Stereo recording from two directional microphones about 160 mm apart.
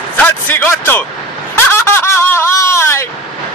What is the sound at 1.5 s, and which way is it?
Snicker, 15° left (ahead or behind).